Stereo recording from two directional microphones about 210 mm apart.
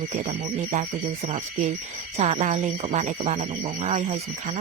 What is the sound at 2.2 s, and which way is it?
Speech, 30° right (ahead or behind).